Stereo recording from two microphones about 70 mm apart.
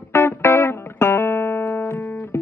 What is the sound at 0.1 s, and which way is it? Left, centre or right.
Music, left.